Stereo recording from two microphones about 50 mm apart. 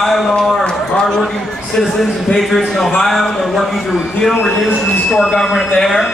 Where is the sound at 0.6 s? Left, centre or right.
Centre.